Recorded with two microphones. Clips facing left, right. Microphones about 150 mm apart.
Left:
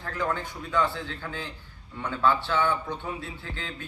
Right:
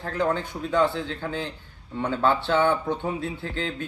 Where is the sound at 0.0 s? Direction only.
30° right (ahead or behind).